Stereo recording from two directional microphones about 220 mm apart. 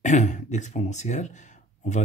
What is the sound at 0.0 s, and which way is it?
Speech, 35° left (ahead or behind).